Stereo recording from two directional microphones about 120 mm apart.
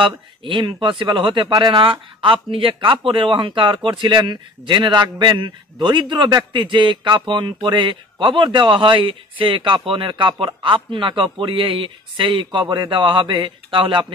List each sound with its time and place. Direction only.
0.0 s a man's voice: 45° right (ahead or behind)